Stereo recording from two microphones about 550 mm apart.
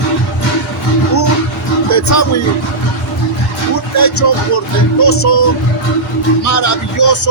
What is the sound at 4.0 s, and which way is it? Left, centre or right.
Speech, left.